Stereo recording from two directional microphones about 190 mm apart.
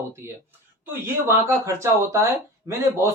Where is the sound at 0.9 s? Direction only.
15° right (ahead or behind).